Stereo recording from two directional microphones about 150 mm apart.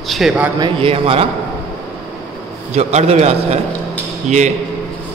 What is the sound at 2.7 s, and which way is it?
Speech, 45° right (ahead or behind).